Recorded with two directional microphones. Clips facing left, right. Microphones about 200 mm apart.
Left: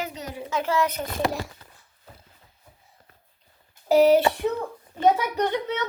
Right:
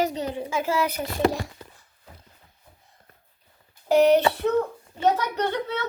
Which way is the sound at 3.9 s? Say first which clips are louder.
Left 1 dB; 5° left (ahead or behind).